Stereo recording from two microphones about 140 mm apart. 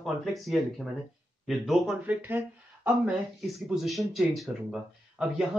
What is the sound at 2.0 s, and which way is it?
Speech, 15° right (ahead or behind).